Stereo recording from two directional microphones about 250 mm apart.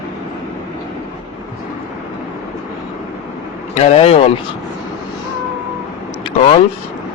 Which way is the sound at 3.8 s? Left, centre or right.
Left.